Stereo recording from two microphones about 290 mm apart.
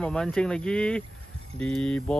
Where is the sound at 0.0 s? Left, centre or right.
Centre.